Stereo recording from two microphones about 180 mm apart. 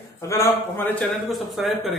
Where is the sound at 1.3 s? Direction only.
Centre (ahead or behind).